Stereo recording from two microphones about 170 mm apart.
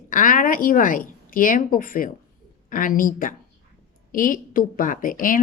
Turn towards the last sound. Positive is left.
turn(degrees=50)  # may be behind; listen again after turning